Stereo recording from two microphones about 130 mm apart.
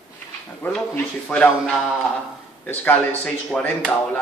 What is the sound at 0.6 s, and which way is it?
Speech, 15° left (ahead or behind).